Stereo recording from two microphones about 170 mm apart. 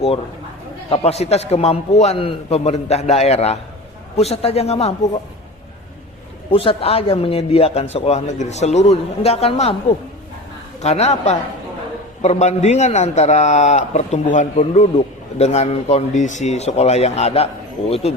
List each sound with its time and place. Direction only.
0.9 s a man's voice: 35° left (ahead or behind)
6.5 s a man's voice: 30° left (ahead or behind)
10.8 s a man's voice: 40° left (ahead or behind)